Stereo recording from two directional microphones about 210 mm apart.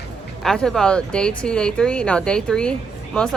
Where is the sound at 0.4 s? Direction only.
Centre (ahead or behind).